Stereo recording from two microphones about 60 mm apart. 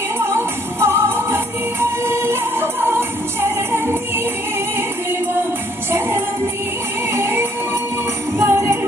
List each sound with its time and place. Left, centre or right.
0.2 s music: right
5.9 s music: right